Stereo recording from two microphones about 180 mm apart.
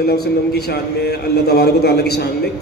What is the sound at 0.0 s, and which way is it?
A man's voice, 60° left (ahead or behind).